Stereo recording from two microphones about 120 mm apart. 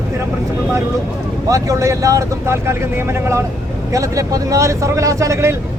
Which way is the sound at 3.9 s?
25° right (ahead or behind).